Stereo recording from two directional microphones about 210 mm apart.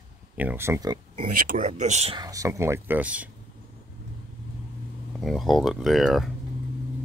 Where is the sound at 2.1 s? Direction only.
15° right (ahead or behind).